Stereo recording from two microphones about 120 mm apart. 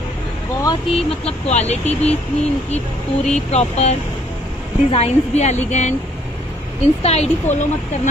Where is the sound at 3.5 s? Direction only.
65° left (ahead or behind).